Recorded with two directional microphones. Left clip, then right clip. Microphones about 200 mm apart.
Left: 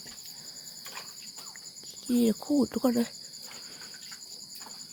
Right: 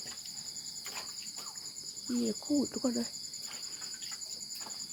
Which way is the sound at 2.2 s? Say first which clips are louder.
Left 5 dB; 45° left (ahead or behind).